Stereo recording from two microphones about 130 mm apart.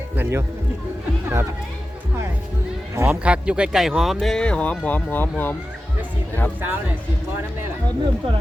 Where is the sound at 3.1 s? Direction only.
10° right (ahead or behind); by 5.5 s 15° left (ahead or behind).